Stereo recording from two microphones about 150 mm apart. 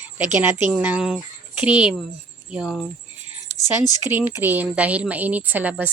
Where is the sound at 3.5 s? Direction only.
50° right (ahead or behind).